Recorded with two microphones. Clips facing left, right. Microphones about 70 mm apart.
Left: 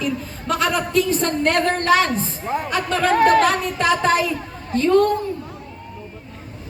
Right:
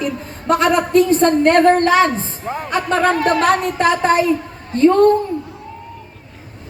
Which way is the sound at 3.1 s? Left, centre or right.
Left.